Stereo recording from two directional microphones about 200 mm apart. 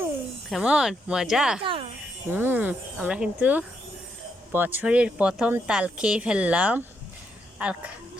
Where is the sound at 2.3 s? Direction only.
10° right (ahead or behind).